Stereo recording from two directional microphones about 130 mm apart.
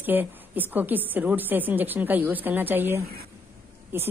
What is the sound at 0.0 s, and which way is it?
A woman's voice, 15° right (ahead or behind).